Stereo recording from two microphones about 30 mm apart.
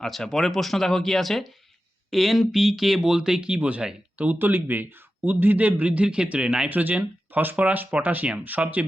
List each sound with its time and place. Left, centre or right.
0.0 s speech: centre
2.0 s speech: centre
3.0 s speech: right
3.6 s speech: right
4.2 s speech: right
6.7 s speech: right
7.5 s speech: right